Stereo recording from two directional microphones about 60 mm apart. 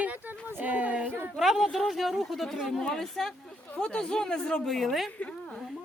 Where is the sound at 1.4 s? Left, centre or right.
Centre.